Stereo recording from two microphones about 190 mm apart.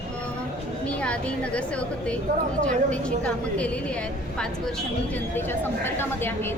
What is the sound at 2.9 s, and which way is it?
Speech, 5° left (ahead or behind).